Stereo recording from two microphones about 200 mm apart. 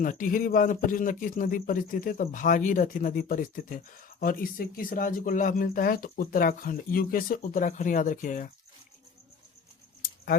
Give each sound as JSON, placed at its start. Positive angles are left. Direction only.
{"t": 0.0, "sound": "speech", "side_deg": 40}